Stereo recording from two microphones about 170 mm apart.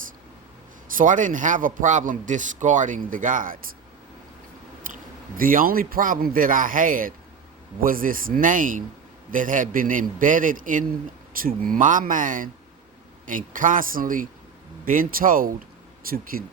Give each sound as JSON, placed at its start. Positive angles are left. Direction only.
{"t": 0.9, "sound": "a man's voice", "side_deg": -50}
{"t": 5.4, "sound": "a man's voice", "side_deg": -55}